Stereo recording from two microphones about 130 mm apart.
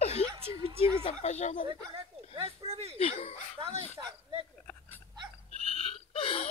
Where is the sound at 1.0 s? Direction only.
55° left (ahead or behind).